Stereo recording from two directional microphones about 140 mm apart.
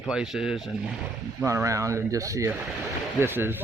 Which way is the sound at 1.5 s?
20° right (ahead or behind).